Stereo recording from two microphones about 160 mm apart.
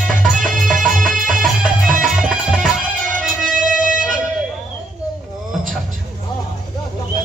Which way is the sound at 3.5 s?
55° right (ahead or behind).